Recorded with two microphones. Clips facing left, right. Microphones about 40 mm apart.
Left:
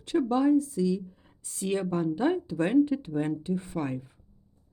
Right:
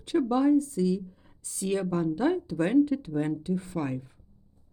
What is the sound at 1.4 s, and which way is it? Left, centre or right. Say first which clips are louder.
Speech: even; left.